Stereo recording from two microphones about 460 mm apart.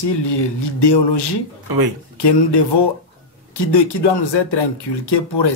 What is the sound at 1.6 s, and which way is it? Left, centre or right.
Speech, right.